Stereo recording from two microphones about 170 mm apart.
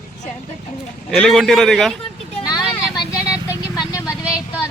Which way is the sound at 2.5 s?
25° left (ahead or behind).